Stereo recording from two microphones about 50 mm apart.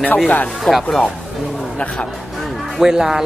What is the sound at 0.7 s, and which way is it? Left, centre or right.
Speech, left.